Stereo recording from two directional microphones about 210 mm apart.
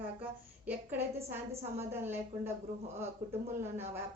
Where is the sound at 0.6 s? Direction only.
10° right (ahead or behind).